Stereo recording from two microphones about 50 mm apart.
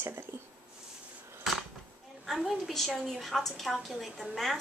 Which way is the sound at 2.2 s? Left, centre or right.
Centre.